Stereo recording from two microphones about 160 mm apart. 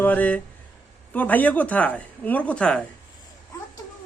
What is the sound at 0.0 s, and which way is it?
Speech, 10° left (ahead or behind).